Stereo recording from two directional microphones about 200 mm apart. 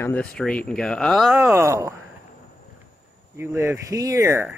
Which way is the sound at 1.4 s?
10° right (ahead or behind).